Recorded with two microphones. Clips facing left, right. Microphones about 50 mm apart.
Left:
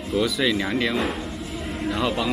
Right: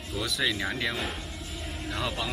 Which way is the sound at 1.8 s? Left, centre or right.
Centre.